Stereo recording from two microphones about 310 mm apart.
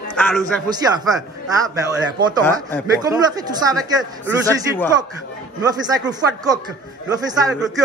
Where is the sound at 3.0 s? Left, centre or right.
Centre.